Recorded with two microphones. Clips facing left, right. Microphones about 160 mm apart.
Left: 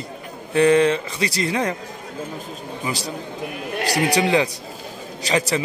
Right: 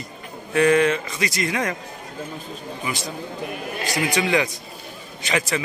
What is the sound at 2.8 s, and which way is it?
Speech, 35° left (ahead or behind).